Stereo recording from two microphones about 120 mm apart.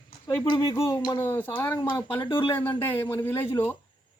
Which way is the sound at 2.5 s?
15° left (ahead or behind).